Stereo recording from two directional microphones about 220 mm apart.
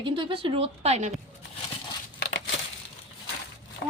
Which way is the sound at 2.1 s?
45° left (ahead or behind).